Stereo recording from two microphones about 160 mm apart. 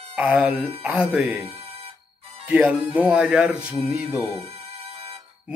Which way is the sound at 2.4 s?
10° right (ahead or behind).